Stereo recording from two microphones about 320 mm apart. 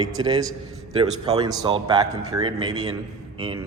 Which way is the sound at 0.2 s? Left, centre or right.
Centre.